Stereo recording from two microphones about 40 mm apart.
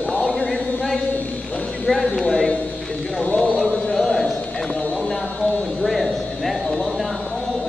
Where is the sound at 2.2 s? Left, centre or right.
Centre.